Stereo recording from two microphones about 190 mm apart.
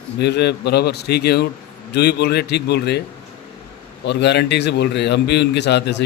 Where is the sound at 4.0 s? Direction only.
65° left (ahead or behind).